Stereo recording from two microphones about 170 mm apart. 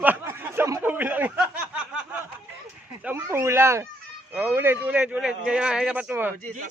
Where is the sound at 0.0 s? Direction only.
10° right (ahead or behind).